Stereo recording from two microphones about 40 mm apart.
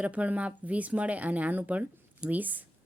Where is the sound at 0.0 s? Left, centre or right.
Right.